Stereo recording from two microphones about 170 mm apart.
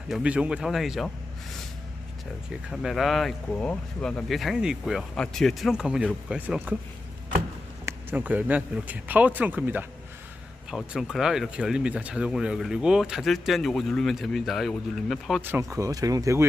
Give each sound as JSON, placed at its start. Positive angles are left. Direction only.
{"t": 0.1, "sound": "speech", "side_deg": -5}
{"t": 2.6, "sound": "speech", "side_deg": 0}
{"t": 7.9, "sound": "speech", "side_deg": -10}
{"t": 15.4, "sound": "speech", "side_deg": -10}